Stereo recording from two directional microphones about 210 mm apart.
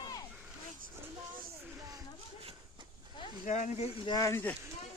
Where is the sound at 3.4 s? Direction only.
35° left (ahead or behind); by 4.5 s 10° left (ahead or behind).